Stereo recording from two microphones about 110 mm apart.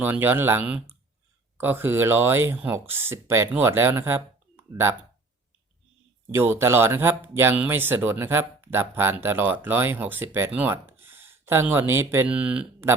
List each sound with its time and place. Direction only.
0.0 s speech: 15° right (ahead or behind)
0.6 s speech: 10° right (ahead or behind)
6.3 s speech: 20° right (ahead or behind)
12.3 s speech: 10° right (ahead or behind)